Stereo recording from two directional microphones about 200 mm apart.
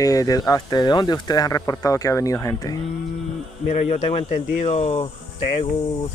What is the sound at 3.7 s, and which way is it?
Speech, 35° left (ahead or behind).